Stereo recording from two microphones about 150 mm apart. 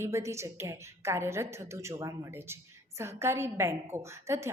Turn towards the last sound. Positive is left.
turn(degrees=-20)  # may be behind; listen again after turning